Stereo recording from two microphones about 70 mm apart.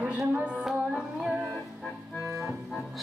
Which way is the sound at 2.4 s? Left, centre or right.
Centre.